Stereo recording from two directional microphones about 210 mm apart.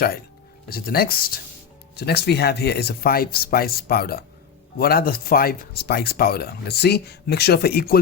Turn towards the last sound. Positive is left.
turn(degrees=50)  # may be behind; listen again after turning